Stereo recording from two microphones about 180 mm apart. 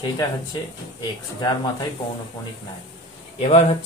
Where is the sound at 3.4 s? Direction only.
35° left (ahead or behind).